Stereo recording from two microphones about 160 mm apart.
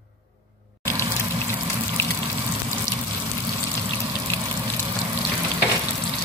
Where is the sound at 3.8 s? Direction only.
30° right (ahead or behind).